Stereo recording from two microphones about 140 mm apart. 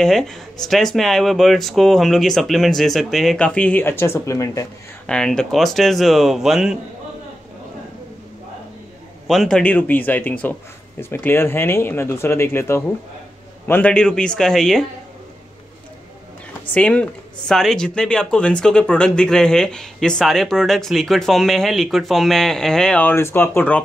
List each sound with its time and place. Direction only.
0.0 s speech: centre (ahead or behind); by 4.6 s 20° left (ahead or behind)
5.0 s speech: 5° left (ahead or behind)
9.3 s speech: centre (ahead or behind)
16.7 s speech: 10° left (ahead or behind)